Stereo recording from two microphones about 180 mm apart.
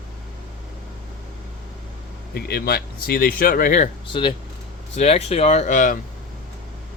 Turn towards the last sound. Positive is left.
turn(degrees=45)  # may be behind; listen again after turning